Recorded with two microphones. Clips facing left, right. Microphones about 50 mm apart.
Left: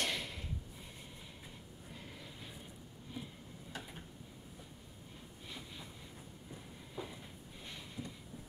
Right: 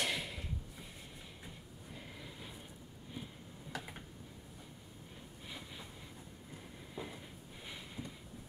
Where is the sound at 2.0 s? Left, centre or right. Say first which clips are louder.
Right 1 dB; centre.